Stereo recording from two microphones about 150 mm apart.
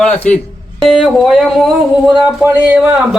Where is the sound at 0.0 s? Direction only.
10° left (ahead or behind).